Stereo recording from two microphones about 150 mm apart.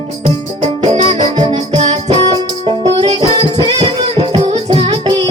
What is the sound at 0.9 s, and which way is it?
Music, 45° right (ahead or behind).